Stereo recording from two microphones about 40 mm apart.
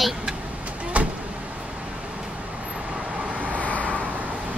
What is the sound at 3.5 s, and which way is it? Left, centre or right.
Vehicle, left.